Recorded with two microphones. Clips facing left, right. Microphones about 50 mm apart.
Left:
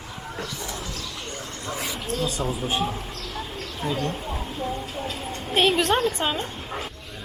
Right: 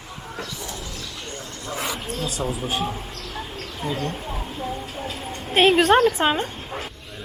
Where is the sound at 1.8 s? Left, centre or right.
Centre.